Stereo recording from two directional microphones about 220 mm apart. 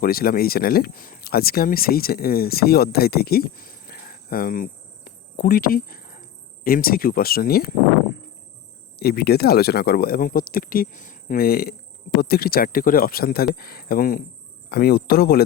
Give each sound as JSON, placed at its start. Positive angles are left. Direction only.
{"t": 0.0, "sound": "speech", "side_deg": 40}
{"t": 9.0, "sound": "speech", "side_deg": 45}